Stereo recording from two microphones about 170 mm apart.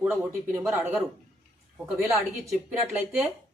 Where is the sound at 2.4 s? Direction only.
10° right (ahead or behind).